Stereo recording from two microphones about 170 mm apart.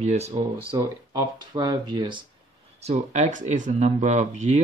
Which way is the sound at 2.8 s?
40° right (ahead or behind).